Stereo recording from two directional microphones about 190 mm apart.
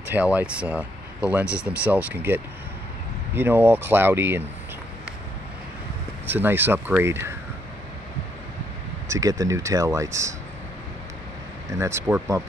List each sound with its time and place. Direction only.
0.1 s speech: 10° right (ahead or behind)
6.2 s speech: 10° right (ahead or behind)
9.1 s speech: 20° right (ahead or behind)
11.8 s speech: 15° right (ahead or behind)